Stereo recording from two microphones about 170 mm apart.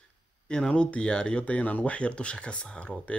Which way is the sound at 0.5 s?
5° left (ahead or behind).